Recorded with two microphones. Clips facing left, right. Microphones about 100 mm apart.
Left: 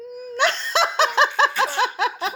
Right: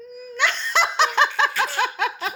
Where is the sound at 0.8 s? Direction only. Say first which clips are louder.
Left 1 dB; 35° left (ahead or behind).